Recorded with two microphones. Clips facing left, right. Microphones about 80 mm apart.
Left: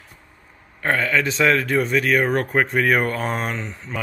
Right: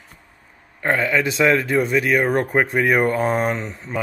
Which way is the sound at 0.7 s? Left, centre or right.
Centre.